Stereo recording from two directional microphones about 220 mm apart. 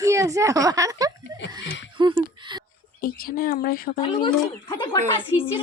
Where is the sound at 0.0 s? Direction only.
15° right (ahead or behind).